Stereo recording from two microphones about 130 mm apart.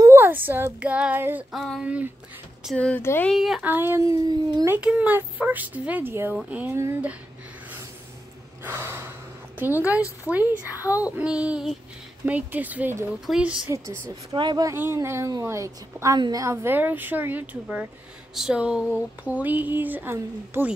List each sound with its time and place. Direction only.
0.0 s child singing: 20° right (ahead or behind)
1.5 s speech: 5° left (ahead or behind)
1.8 s a sound: 10° right (ahead or behind)
2.6 s speech: 5° left (ahead or behind)
3.0 s speech: 20° left (ahead or behind)
3.3 s speech: centre (ahead or behind)
3.6 s a woman's voice: 15° right (ahead or behind)
4.6 s a sound: 10° right (ahead or behind)
6.7 s a woman's voice: 20° right (ahead or behind)
8.6 s gasp: 20° right (ahead or behind)
9.6 s a sound: 15° right (ahead or behind)
14.3 s speech: 35° right (ahead or behind)
14.7 s a woman's voice: 20° right (ahead or behind)
16.2 s a sound: 30° right (ahead or behind)